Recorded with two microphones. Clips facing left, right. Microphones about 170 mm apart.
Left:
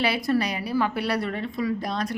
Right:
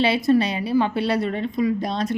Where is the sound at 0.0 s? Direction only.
25° right (ahead or behind).